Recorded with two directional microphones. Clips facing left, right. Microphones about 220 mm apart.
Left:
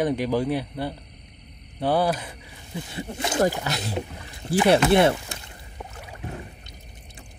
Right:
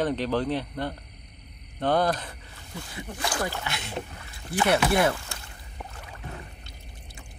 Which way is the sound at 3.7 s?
35° left (ahead or behind).